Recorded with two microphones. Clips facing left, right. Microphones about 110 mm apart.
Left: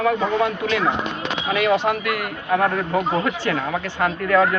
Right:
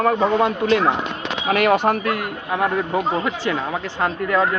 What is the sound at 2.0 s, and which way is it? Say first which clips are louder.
A man's voice: right 2 dB; 25° right (ahead or behind).